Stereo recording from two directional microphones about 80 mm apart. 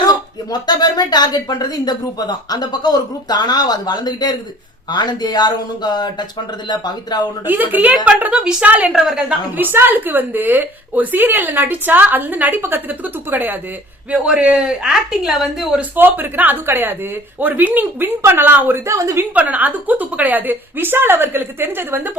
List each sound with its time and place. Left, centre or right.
0.5 s speech: left
7.4 s a woman's voice: right
9.0 s a woman's voice: centre
9.6 s a woman's voice: right
14.1 s a woman's voice: centre
15.8 s a woman's voice: right
18.9 s a woman's voice: right
19.3 s a woman's voice: centre